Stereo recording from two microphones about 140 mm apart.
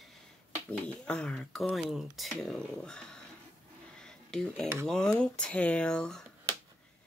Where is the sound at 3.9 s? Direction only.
5° left (ahead or behind).